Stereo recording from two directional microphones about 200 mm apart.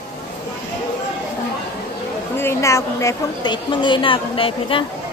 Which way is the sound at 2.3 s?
15° left (ahead or behind).